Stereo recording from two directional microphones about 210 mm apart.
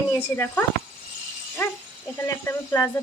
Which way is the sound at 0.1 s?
10° left (ahead or behind).